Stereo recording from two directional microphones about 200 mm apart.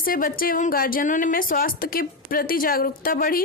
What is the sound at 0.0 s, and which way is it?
A woman's voice, 45° left (ahead or behind).